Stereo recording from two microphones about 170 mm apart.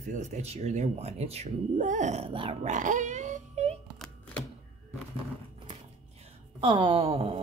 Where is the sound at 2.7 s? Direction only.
45° right (ahead or behind).